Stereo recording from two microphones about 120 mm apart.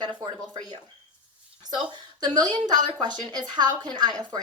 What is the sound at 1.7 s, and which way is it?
A woman's voice, 35° right (ahead or behind).